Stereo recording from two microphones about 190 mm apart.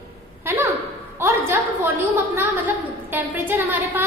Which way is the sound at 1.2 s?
10° right (ahead or behind).